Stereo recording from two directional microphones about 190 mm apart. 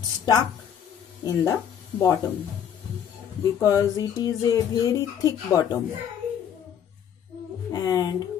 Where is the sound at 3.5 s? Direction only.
15° left (ahead or behind).